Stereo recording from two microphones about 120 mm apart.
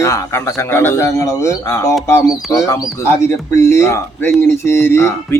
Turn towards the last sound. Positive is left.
turn(degrees=20)  # may be behind; listen again after turning